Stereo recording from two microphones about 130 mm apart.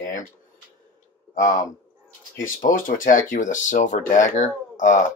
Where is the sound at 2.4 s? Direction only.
85° left.